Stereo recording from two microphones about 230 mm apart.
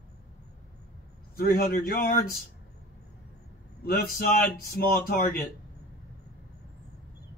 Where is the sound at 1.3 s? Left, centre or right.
Left.